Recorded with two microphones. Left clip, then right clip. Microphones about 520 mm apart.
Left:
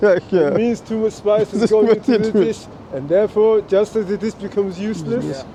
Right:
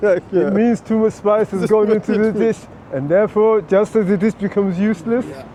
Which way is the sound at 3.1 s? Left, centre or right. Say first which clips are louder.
Even; right.